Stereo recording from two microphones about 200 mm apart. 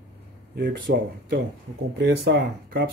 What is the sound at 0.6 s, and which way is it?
Speech, 45° right (ahead or behind).